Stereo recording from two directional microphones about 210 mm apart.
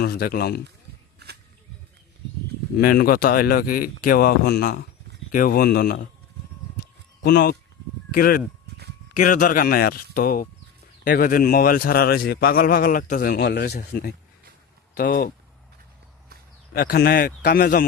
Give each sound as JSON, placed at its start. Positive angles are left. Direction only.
{"t": 0.0, "sound": "a man's voice", "side_deg": 45}
{"t": 1.2, "sound": "a sound", "side_deg": -50}
{"t": 2.7, "sound": "a man's voice", "side_deg": 45}
{"t": 7.2, "sound": "a man's voice", "side_deg": 45}
{"t": 16.7, "sound": "a man's voice", "side_deg": 45}